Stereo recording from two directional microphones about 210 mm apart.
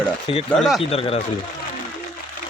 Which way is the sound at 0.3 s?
25° left (ahead or behind).